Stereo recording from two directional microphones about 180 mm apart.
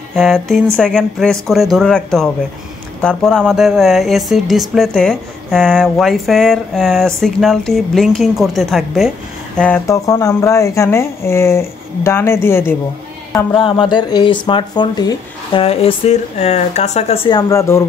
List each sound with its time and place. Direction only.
0.1 s speech: centre (ahead or behind)
9.6 s speech: 15° left (ahead or behind)
13.6 s speech: 25° left (ahead or behind)